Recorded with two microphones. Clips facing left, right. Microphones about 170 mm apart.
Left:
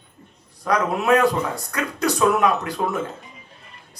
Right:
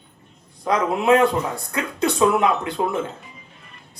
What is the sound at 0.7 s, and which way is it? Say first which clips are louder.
A man's voice: right 1 dB; 25° right (ahead or behind).